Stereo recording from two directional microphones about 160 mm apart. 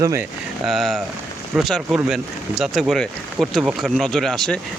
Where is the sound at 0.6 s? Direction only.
Centre (ahead or behind).